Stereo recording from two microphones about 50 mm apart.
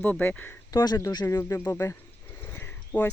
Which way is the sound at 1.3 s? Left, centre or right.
Left.